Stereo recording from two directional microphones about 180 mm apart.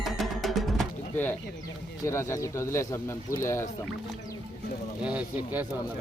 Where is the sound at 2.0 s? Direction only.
15° left (ahead or behind).